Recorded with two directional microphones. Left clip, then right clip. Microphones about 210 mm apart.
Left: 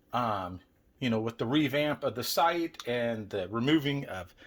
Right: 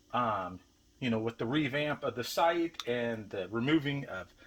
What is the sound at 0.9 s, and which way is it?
Speech, 30° left (ahead or behind).